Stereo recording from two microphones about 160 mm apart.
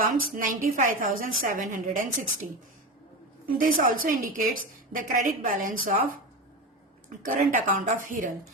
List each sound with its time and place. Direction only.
0.0 s a woman's voice: 60° right (ahead or behind)
3.6 s a woman's voice: 60° right (ahead or behind)
7.3 s speech: 55° right (ahead or behind)